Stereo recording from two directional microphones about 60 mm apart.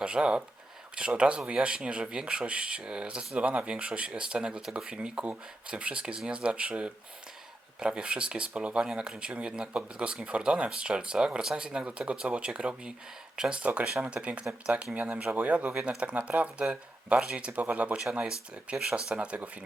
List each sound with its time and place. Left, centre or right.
0.0 s speech: centre
18.0 s speech: centre